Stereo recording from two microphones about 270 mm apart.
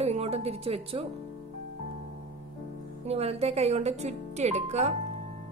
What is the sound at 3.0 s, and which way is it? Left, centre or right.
A woman's voice, right.